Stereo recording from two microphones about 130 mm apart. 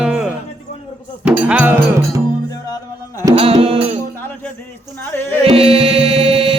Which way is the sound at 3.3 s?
45° right (ahead or behind).